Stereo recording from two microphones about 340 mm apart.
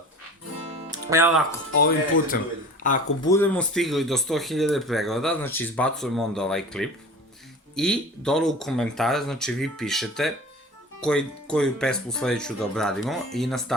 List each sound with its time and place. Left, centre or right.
0.9 s music: centre
1.8 s speech: left
3.2 s speech: centre